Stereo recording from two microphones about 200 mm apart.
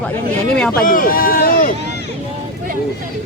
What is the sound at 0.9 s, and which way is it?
Speech, 45° left (ahead or behind).